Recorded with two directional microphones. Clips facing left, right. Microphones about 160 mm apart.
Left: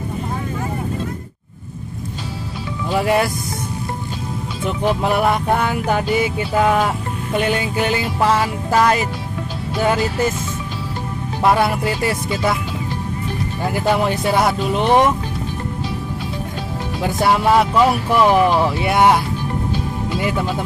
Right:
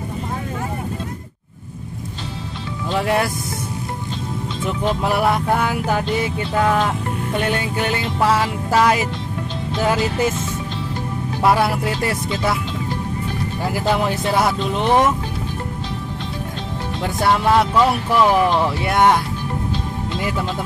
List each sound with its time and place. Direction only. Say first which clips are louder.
2.9 s speech: left 2 dB; 5° left (ahead or behind)
4.8 s speech: left 2 dB; centre (ahead or behind)
11.4 s speech: left 1 dB; centre (ahead or behind)
13.7 s speech: left 2 dB; centre (ahead or behind)
17.0 s speech: left 2 dB; 5° left (ahead or behind)